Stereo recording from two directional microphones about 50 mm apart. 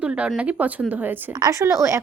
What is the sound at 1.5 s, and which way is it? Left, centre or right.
Speech, right.